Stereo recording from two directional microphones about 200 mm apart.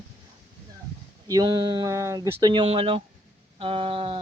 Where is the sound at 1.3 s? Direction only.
20° right (ahead or behind).